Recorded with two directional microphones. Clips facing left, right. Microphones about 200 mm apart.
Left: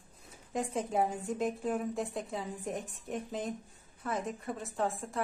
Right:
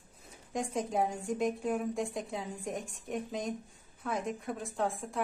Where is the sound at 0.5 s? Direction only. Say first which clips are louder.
Even; centre (ahead or behind).